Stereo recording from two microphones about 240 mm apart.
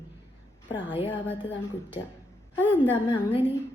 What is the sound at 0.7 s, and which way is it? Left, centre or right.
Speech, centre.